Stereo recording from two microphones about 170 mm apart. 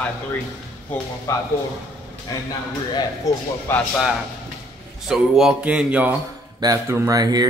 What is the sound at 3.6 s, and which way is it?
Speech, 10° left (ahead or behind).